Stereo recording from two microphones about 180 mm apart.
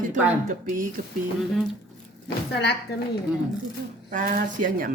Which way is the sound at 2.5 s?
65° left (ahead or behind).